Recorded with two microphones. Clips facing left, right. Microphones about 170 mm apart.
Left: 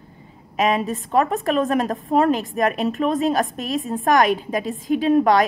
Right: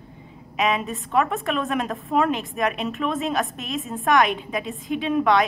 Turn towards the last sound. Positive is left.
turn(degrees=40)  # may be behind; listen again after turning